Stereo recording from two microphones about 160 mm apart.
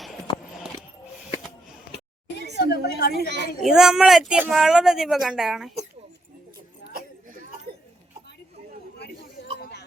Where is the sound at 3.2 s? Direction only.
90° right.